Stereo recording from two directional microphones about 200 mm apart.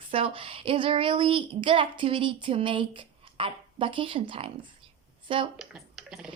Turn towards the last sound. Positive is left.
turn(degrees=0)  # may be behind; listen again after turning